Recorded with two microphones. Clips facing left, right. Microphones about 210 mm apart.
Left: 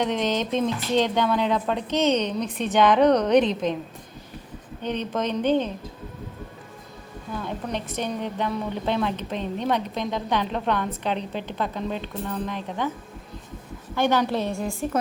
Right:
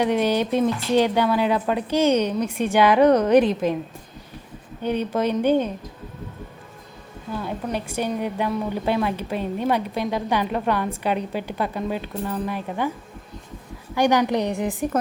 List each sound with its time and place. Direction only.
0.0 s a woman's voice: 10° right (ahead or behind)
4.8 s a woman's voice: 10° right (ahead or behind)
7.4 s a woman's voice: 10° right (ahead or behind)
13.9 s a woman's voice: 15° right (ahead or behind)